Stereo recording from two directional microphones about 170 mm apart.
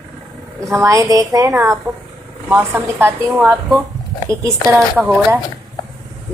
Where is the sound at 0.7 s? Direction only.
20° right (ahead or behind).